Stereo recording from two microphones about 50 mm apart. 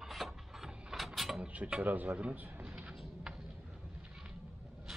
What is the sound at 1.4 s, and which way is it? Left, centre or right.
Speech, right.